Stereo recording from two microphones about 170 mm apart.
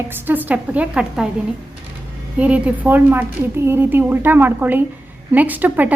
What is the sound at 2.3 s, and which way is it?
A woman's voice, 10° right (ahead or behind).